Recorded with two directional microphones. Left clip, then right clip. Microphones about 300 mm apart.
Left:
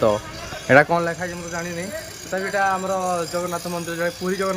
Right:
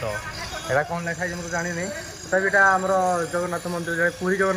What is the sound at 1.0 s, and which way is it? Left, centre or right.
Speech, centre.